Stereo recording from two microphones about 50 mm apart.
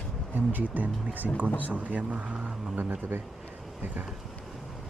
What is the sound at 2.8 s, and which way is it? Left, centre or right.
Speech, right.